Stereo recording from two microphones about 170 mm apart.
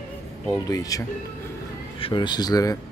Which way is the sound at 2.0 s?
25° left (ahead or behind).